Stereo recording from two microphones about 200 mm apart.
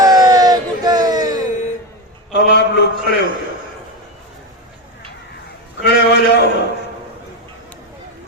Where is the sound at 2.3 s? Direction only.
60° left (ahead or behind).